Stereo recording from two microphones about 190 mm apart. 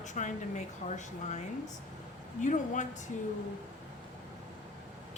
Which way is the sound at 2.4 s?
40° left (ahead or behind).